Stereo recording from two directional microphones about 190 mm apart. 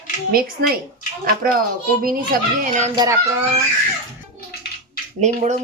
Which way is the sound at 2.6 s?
40° right (ahead or behind).